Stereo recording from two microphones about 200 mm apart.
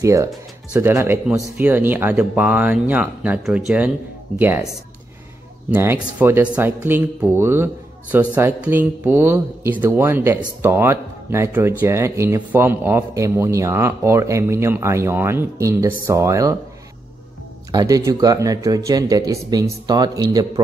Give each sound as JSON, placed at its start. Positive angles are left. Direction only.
{"t": 0.0, "sound": "speech", "side_deg": -15}
{"t": 17.6, "sound": "a man's voice", "side_deg": -20}